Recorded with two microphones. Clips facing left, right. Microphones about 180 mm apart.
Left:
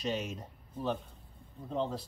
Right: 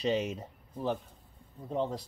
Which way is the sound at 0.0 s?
30° right (ahead or behind).